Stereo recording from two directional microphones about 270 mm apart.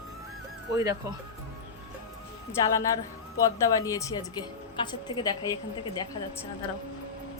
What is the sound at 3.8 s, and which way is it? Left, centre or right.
A woman's voice, centre.